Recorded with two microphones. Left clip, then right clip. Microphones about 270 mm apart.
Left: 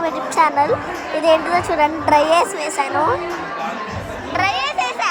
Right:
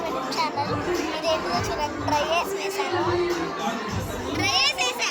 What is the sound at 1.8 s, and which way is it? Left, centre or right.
Speech, left.